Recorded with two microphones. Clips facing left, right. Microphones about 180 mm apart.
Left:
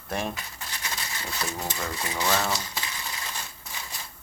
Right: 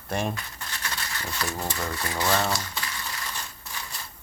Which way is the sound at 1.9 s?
15° left (ahead or behind).